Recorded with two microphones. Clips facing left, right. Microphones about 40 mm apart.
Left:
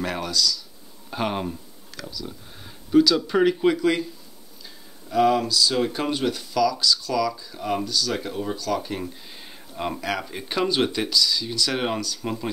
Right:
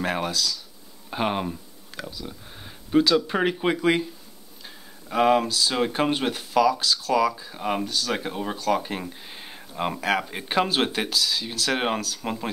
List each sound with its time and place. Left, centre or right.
0.0 s speech: right
1.1 s speech: centre
1.9 s a sound: right
2.2 s speech: centre
9.1 s a sound: right
9.9 s speech: right